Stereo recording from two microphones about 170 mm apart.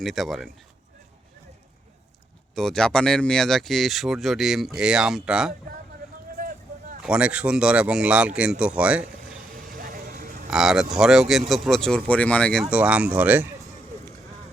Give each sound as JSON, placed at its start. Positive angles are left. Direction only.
{"t": 0.0, "sound": "speech", "side_deg": 0}
{"t": 2.6, "sound": "speech", "side_deg": 5}
{"t": 7.0, "sound": "speech", "side_deg": -5}
{"t": 9.5, "sound": "vehicle", "side_deg": -55}
{"t": 10.5, "sound": "speech", "side_deg": -5}
{"t": 12.7, "sound": "speech", "side_deg": -5}